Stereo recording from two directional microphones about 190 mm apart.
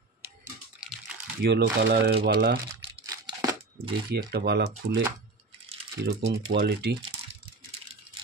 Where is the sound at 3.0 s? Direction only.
20° right (ahead or behind).